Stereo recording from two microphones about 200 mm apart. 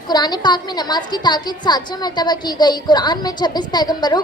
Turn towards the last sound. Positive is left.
turn(degrees=20)  # may be behind; listen again after turning